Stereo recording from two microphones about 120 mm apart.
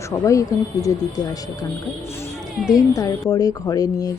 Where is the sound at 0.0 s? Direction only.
25° left (ahead or behind).